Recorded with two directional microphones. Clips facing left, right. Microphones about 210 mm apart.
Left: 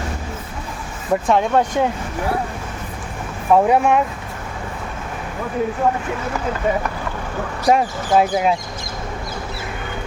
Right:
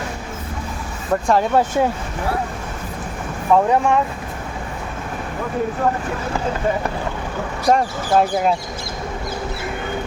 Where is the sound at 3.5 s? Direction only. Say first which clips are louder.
Left 1 dB; 10° left (ahead or behind).